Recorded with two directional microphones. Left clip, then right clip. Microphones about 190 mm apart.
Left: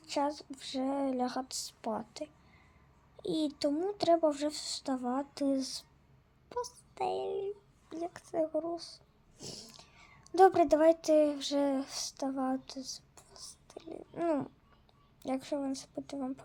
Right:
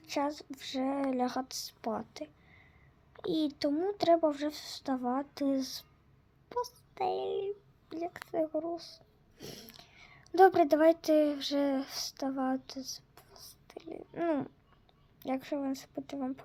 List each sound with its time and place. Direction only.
0.0 s speech: centre (ahead or behind)